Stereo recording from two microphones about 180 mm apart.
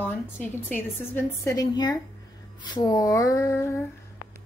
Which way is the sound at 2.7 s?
20° left (ahead or behind).